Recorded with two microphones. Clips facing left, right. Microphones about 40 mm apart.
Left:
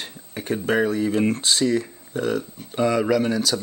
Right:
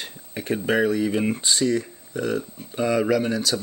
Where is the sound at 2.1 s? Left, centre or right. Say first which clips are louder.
Left 1 dB; left.